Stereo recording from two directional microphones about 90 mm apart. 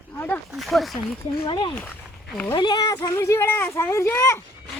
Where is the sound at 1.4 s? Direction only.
55° left (ahead or behind).